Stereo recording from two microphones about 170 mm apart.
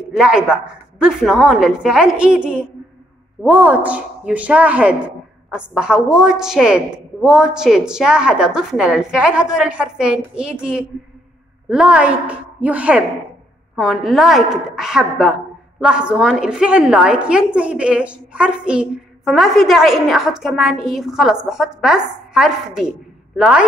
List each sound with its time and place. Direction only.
0.2 s a woman's voice: 5° right (ahead or behind)